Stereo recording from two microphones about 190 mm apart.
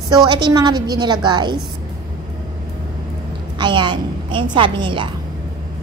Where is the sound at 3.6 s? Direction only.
25° right (ahead or behind).